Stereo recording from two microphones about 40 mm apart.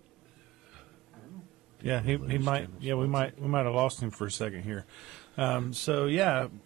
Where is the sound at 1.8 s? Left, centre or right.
Centre.